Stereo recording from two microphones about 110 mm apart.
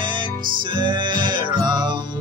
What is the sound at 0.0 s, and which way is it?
Music, 45° right (ahead or behind).